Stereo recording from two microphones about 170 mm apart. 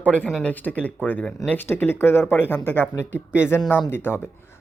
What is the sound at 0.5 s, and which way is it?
A man's voice, 10° left (ahead or behind).